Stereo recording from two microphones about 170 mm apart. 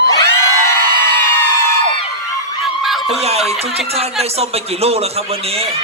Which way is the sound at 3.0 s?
35° right (ahead or behind).